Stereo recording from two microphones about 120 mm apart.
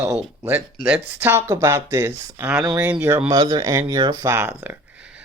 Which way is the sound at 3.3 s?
30° right (ahead or behind).